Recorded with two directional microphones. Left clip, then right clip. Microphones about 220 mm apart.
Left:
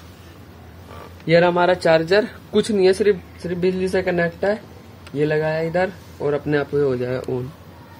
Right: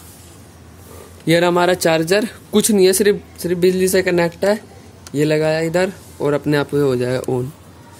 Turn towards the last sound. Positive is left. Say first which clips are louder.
# right 4 dB
turn(degrees=-45)  # may be behind; listen again after turning